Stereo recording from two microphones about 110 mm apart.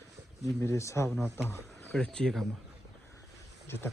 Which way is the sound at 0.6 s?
25° left (ahead or behind).